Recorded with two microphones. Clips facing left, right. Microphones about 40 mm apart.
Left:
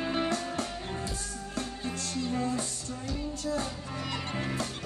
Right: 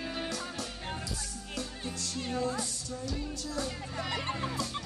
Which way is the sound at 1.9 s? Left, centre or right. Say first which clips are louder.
Left 4 dB; left.